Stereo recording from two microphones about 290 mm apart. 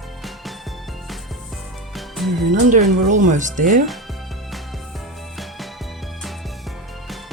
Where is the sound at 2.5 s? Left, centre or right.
Right.